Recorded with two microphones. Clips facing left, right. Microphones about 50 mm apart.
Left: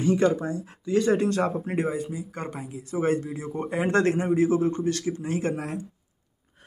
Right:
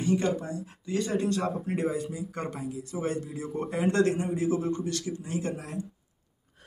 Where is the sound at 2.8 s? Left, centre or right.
Left.